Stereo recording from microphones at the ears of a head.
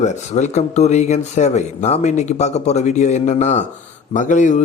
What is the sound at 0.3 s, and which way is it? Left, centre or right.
Speech, left.